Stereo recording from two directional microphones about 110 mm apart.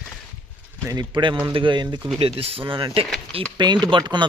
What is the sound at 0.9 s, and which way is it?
Speech, 40° right (ahead or behind).